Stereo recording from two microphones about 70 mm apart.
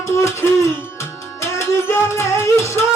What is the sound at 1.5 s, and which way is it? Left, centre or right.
Music, left.